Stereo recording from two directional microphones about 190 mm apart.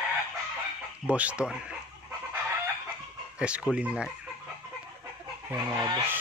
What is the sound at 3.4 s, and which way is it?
Speech, 5° right (ahead or behind).